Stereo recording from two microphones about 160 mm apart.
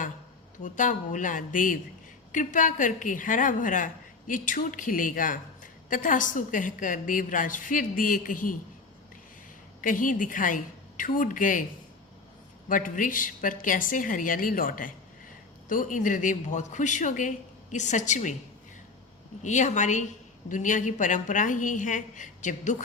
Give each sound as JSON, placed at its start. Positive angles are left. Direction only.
{"t": 0.6, "sound": "a woman's voice", "side_deg": 50}
{"t": 9.8, "sound": "a woman's voice", "side_deg": 55}
{"t": 12.6, "sound": "a woman's voice", "side_deg": 55}
{"t": 19.4, "sound": "speech", "side_deg": 50}